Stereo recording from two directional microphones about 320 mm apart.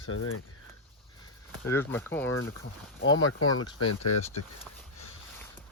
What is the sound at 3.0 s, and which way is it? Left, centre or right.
Speech, left.